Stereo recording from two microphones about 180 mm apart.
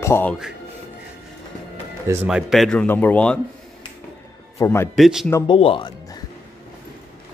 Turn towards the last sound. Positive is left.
turn(degrees=30)  # may be behind; listen again after turning